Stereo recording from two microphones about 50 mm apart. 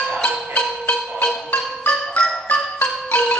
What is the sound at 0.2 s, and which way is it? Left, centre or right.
Music, left.